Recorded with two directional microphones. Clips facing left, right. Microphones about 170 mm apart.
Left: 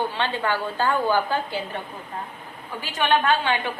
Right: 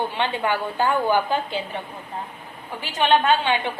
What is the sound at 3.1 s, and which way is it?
Speech, 20° right (ahead or behind).